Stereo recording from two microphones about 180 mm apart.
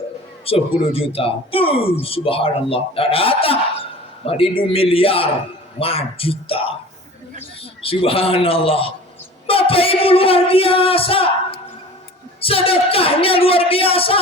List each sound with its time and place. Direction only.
0.4 s a man's voice: 30° left (ahead or behind)
7.8 s a man's voice: 30° left (ahead or behind)
12.4 s a man's voice: 30° left (ahead or behind)